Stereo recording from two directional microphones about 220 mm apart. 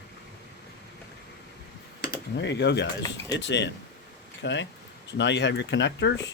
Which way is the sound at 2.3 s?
50° left (ahead or behind).